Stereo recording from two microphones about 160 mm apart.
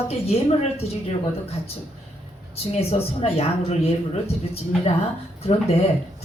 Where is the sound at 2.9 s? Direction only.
40° left (ahead or behind).